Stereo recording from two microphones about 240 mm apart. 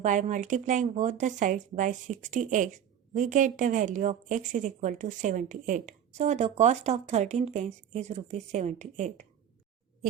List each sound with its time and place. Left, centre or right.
0.0 s a woman's voice: right